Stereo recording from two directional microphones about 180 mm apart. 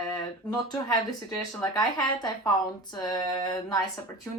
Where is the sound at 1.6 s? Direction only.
20° left (ahead or behind).